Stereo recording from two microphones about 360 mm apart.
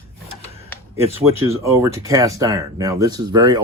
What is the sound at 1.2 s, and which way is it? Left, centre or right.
Speech, centre.